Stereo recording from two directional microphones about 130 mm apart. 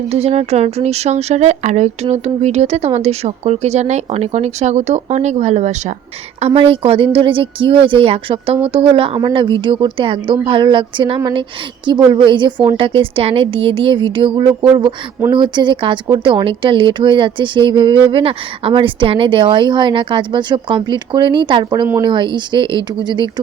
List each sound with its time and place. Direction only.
0.1 s speech: 55° right (ahead or behind)
6.4 s speech: 45° right (ahead or behind)